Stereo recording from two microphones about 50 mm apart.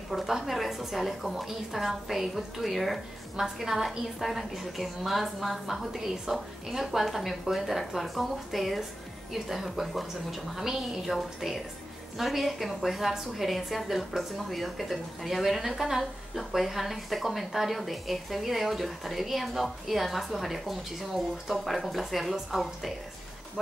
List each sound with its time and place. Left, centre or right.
0.1 s a woman's voice: centre